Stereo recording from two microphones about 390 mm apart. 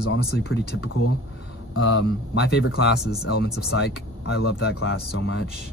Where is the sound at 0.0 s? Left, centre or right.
Left.